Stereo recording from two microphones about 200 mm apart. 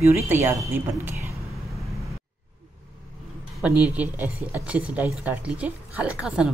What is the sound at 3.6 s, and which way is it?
A woman's voice, 5° right (ahead or behind).